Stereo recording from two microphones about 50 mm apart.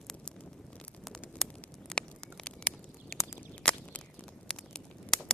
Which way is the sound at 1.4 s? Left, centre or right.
Centre.